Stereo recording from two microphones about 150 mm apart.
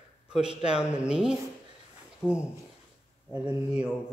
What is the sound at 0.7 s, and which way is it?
Speech, 5° right (ahead or behind).